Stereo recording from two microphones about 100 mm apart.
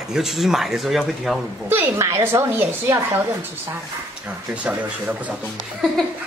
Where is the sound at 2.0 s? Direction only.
30° right (ahead or behind).